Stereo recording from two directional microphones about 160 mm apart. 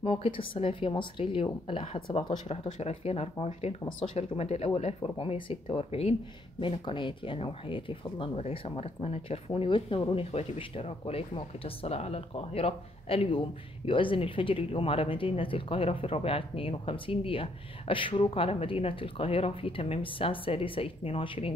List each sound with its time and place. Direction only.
0.0 s speech: 35° left (ahead or behind)